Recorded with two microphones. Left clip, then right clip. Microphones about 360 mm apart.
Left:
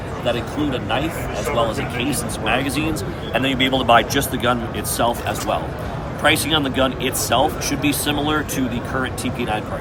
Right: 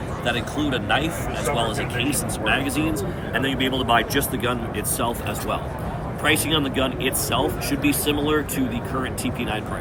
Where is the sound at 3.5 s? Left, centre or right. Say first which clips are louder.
Left 6 dB; left.